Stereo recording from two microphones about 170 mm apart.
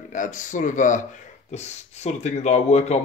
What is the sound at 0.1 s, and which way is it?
Speech, 50° left (ahead or behind).